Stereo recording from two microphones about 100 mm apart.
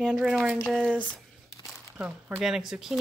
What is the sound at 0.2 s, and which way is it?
Speech, 5° right (ahead or behind).